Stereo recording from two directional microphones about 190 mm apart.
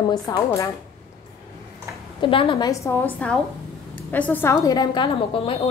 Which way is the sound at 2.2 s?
30° left (ahead or behind).